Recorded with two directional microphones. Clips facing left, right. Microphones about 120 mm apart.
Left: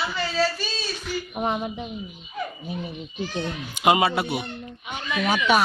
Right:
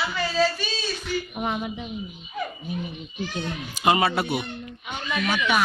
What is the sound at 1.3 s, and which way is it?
Speech, 25° left (ahead or behind).